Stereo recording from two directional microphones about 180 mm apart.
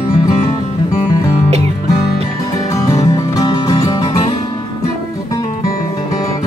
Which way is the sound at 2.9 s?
20° left (ahead or behind).